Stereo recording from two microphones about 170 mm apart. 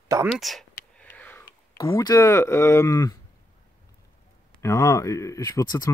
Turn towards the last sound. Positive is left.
turn(degrees=20)  # may be behind; listen again after turning